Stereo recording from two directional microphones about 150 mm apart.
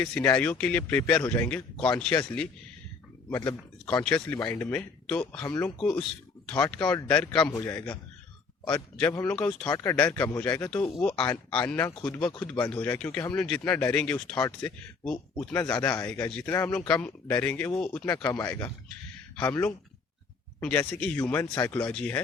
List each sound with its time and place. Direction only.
0.0 s speech: 10° left (ahead or behind)
7.5 s speech: 20° left (ahead or behind)
9.2 s speech: 10° left (ahead or behind)
12.3 s speech: 25° left (ahead or behind)
12.5 s speech: 10° left (ahead or behind)